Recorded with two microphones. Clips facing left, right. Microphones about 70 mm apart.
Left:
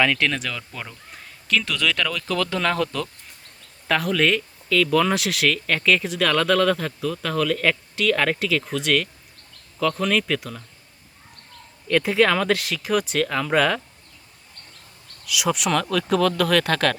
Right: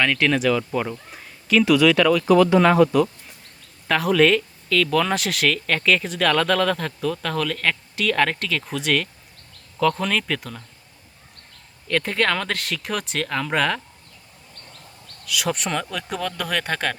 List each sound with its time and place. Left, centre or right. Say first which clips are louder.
0.0 s speech: right 2 dB; centre
3.8 s speech: right 3 dB; centre
11.9 s speech: left 3 dB; centre
15.3 s speech: left 2 dB; centre
15.7 s speech: left 6 dB; centre